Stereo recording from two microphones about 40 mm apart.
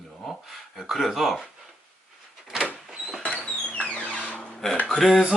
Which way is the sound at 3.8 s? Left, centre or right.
Left.